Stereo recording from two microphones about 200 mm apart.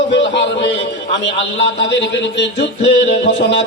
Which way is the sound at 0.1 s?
60° left (ahead or behind).